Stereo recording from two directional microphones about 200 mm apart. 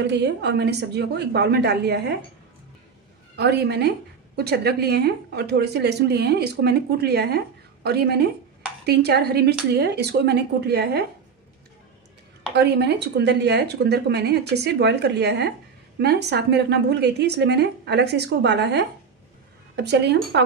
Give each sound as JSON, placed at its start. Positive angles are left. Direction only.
{"t": 0.0, "sound": "speech", "side_deg": -60}
{"t": 3.3, "sound": "speech", "side_deg": -55}
{"t": 12.5, "sound": "speech", "side_deg": -55}